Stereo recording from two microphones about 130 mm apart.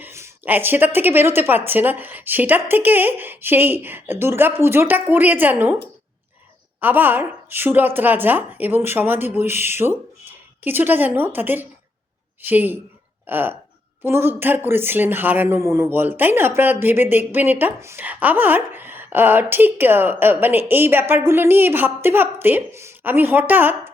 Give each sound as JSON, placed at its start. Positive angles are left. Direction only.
{"t": 0.0, "sound": "speech", "side_deg": -15}
{"t": 6.7, "sound": "speech", "side_deg": -15}